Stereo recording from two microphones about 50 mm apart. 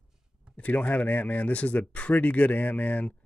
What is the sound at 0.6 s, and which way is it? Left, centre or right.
Speech, left.